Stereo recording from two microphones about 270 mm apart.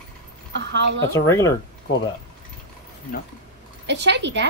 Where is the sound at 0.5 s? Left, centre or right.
Right.